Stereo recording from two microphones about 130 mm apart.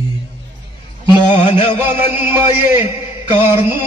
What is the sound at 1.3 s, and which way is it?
Music, 45° left (ahead or behind).